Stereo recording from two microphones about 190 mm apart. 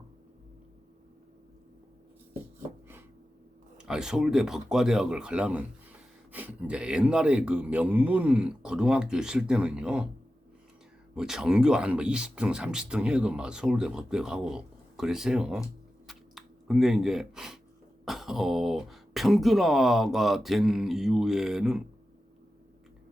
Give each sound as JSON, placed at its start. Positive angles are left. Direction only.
{"t": 3.8, "sound": "speech", "side_deg": -5}
{"t": 11.1, "sound": "speech", "side_deg": -5}
{"t": 16.0, "sound": "a sound", "side_deg": 0}
{"t": 18.0, "sound": "speech", "side_deg": 0}